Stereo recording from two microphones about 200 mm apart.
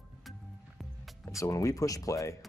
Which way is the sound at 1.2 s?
15° left (ahead or behind).